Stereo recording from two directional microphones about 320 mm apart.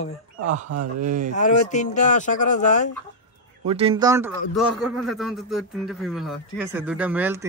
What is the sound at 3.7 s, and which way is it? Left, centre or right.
A man's voice, centre.